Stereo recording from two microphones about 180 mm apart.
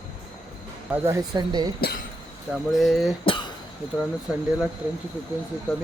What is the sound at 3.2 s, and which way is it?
Cough, 25° left (ahead or behind).